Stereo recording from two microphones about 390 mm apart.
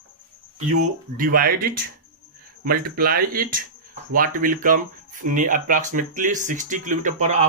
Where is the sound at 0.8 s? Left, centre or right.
Right.